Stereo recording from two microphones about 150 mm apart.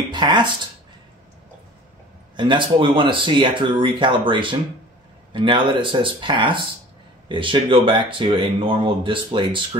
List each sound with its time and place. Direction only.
0.1 s speech: 30° right (ahead or behind)
2.3 s speech: 30° right (ahead or behind)